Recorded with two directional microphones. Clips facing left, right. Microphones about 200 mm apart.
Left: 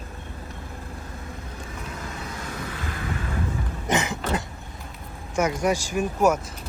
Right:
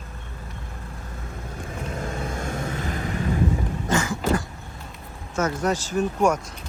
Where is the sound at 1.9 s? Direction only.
50° right (ahead or behind).